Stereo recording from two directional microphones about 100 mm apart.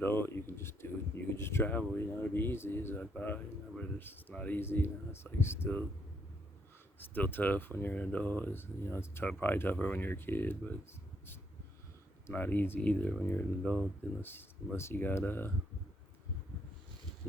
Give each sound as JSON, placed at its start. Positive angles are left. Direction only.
{"t": 0.0, "sound": "speech", "side_deg": 20}
{"t": 7.0, "sound": "speech", "side_deg": 20}
{"t": 12.3, "sound": "speech", "side_deg": 20}
{"t": 14.2, "sound": "speech", "side_deg": 20}